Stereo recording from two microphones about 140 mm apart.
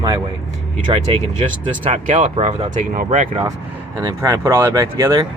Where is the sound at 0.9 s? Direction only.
40° right (ahead or behind).